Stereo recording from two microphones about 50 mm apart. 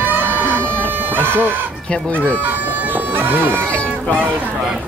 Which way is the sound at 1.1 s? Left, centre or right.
Right.